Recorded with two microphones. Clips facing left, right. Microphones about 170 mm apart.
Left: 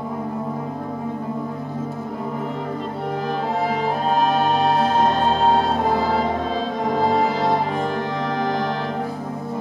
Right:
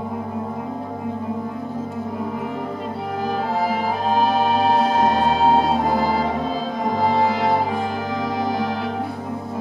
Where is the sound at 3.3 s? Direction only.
5° right (ahead or behind).